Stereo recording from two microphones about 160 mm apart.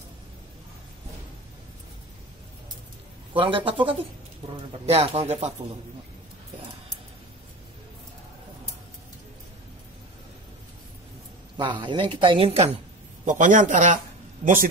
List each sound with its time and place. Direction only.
3.3 s speech: 30° right (ahead or behind)
11.5 s speech: 30° right (ahead or behind)
13.2 s a man's voice: 55° right (ahead or behind)